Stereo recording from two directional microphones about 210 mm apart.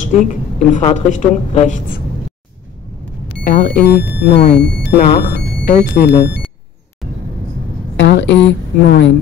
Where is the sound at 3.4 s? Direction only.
40° left (ahead or behind).